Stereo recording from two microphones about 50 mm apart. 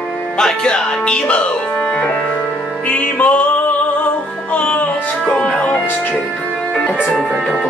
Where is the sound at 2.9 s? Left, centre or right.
Left.